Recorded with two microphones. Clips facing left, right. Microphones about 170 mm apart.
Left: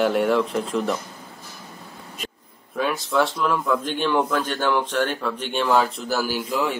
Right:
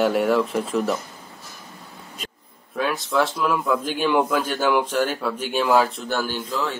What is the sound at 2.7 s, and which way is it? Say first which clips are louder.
A man's voice: even; centre (ahead or behind).